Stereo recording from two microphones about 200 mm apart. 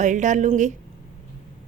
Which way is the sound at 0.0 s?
40° right (ahead or behind).